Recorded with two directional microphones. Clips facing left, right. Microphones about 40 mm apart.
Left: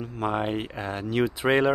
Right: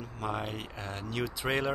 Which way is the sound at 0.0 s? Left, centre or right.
Left.